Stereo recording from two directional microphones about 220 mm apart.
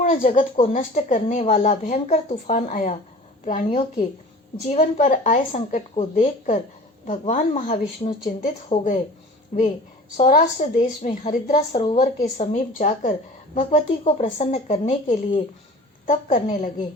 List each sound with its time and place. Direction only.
0.0 s a woman's voice: 35° left (ahead or behind)
10.2 s a woman's voice: 30° left (ahead or behind)